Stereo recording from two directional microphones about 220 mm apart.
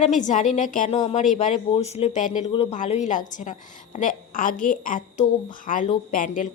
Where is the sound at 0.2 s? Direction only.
35° left (ahead or behind).